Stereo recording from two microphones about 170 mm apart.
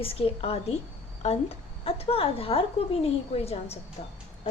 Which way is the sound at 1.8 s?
35° left (ahead or behind).